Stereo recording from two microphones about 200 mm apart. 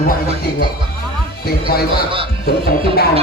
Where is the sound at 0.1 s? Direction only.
50° left (ahead or behind).